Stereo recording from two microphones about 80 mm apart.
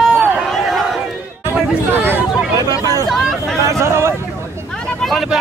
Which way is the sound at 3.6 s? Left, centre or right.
Right.